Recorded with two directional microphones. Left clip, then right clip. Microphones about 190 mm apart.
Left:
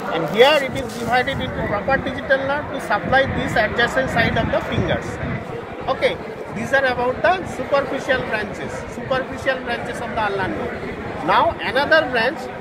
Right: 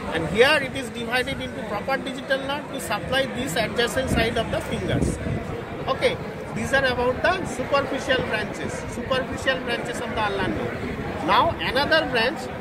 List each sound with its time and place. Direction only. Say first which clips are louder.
0.1 s speech: left 4 dB; 45° right (ahead or behind)
1.9 s speech: left 6 dB; 45° right (ahead or behind)
5.9 s a sound: left 3 dB; 50° right (ahead or behind)
6.7 s speech: left 3 dB; 45° right (ahead or behind)